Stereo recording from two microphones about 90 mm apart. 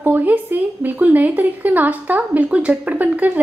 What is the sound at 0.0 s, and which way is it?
Speech, 20° right (ahead or behind).